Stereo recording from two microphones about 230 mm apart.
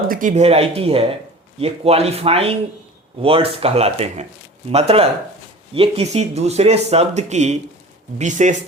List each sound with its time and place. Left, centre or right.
0.1 s speech: right